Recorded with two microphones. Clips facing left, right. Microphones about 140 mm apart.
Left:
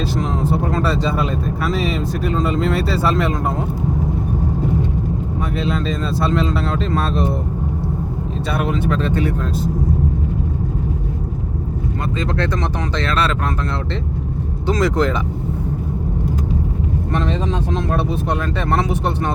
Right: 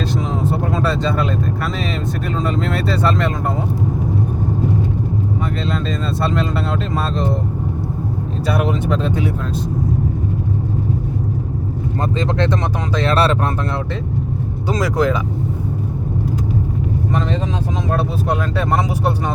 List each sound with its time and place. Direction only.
0.2 s speech: centre (ahead or behind)
5.6 s speech: centre (ahead or behind)
8.6 s speech: 15° right (ahead or behind)
12.2 s speech: 20° right (ahead or behind)
14.8 s speech: 10° right (ahead or behind)
17.9 s speech: 10° right (ahead or behind)